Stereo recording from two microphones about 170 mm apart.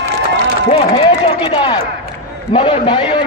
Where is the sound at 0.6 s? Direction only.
30° left (ahead or behind).